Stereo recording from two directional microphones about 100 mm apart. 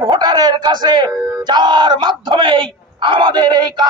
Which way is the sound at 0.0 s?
50° right (ahead or behind).